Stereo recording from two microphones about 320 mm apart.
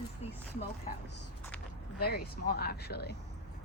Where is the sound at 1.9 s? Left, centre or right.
Left.